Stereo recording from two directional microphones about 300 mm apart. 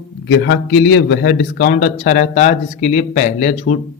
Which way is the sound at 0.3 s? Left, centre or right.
Left.